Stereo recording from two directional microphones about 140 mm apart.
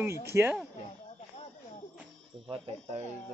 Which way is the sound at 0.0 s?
20° right (ahead or behind).